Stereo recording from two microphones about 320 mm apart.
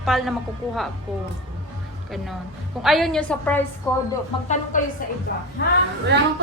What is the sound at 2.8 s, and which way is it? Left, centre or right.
Speech, centre.